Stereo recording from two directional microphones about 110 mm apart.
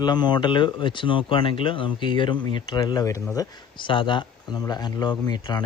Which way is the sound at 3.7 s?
50° left (ahead or behind).